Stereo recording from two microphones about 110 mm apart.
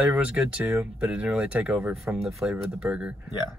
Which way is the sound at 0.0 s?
15° right (ahead or behind).